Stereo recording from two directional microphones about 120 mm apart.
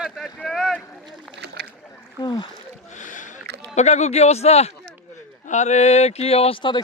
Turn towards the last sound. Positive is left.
turn(degrees=45)  # may be behind; listen again after turning